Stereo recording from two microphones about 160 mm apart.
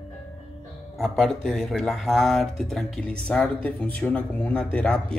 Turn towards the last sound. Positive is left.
turn(degrees=5)  # may be behind; listen again after turning